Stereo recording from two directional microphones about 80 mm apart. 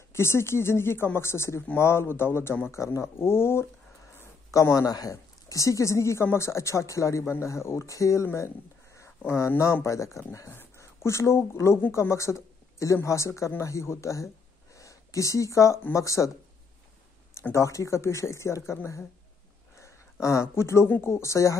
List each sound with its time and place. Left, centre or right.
0.1 s speech: left
2.7 s speech: left
4.5 s speech: left
9.8 s a woman's voice: left
17.3 s speech: left
19.8 s speech: left